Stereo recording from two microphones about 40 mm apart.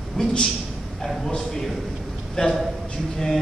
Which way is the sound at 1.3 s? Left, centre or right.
Centre.